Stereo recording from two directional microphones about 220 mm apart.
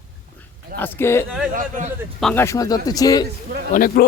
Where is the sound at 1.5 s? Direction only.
35° right (ahead or behind).